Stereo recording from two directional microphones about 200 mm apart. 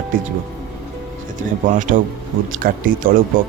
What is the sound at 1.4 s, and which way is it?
Speech, 40° right (ahead or behind).